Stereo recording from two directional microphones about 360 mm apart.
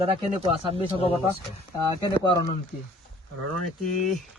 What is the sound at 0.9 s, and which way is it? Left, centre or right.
Speech, centre.